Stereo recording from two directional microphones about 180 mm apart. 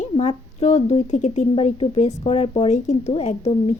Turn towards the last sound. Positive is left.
turn(degrees=35)  # may be behind; listen again after turning